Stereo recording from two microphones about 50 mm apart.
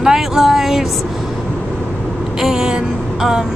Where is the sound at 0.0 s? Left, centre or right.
Centre.